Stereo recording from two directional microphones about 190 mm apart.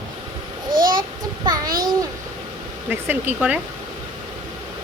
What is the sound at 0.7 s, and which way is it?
Babbling, 45° right (ahead or behind).